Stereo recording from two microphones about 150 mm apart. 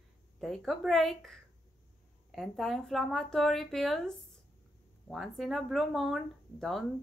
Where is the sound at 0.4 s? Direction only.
Centre (ahead or behind).